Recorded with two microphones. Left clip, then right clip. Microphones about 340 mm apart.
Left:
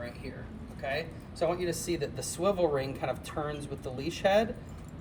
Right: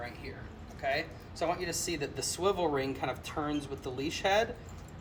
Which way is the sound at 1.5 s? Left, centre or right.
Centre.